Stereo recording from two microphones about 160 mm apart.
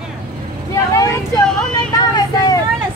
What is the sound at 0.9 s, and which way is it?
Vehicle, 20° left (ahead or behind).